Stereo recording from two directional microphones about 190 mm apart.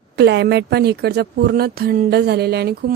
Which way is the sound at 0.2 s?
65° right (ahead or behind).